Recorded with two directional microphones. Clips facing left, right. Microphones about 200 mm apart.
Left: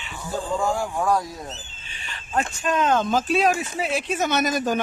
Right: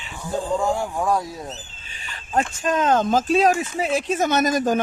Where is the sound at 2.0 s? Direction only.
40° right (ahead or behind).